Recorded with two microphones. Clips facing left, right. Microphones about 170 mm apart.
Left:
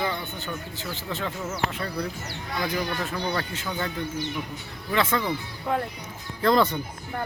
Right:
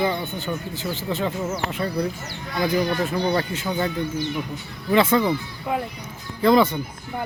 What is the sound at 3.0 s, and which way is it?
Speech, 15° right (ahead or behind).